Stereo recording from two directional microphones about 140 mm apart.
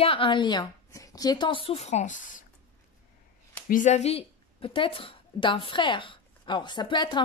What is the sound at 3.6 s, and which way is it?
A woman's voice, 65° left (ahead or behind).